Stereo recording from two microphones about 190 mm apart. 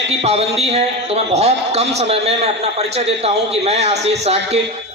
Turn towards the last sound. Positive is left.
turn(degrees=-35)  # may be behind; listen again after turning